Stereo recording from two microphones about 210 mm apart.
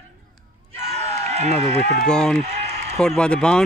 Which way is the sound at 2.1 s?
5° left (ahead or behind).